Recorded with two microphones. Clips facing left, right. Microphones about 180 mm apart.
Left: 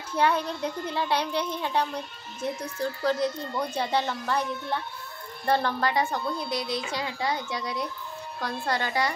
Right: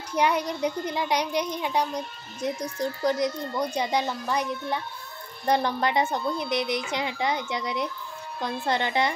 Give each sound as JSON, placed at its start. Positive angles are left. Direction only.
{"t": 0.1, "sound": "a child's voice", "side_deg": -15}